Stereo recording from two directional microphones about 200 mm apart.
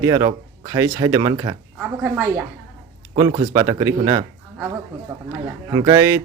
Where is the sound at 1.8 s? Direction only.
10° right (ahead or behind).